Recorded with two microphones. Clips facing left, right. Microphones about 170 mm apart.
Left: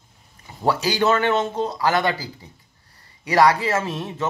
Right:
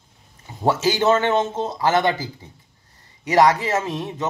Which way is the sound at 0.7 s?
20° right (ahead or behind).